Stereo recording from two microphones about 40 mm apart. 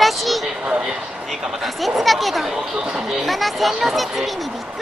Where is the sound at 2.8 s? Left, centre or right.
Centre.